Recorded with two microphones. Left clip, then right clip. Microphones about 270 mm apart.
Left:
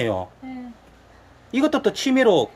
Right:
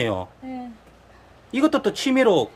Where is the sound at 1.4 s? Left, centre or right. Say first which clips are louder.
Even; centre.